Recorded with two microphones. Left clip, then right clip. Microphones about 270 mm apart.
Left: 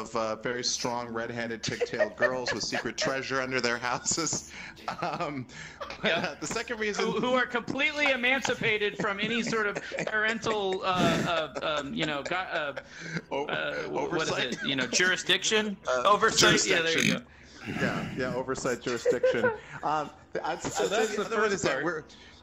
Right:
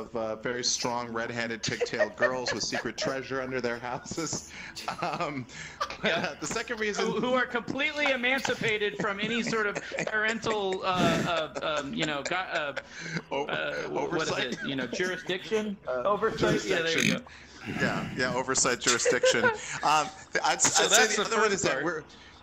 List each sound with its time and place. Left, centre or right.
0.1 s speech: left
0.6 s speech: centre
2.0 s speech: centre
2.7 s speech: centre; by 4.2 s left
4.8 s a man's voice: centre
14.6 s a man's voice: left
16.8 s speech: centre
18.3 s speech: right
21.4 s speech: centre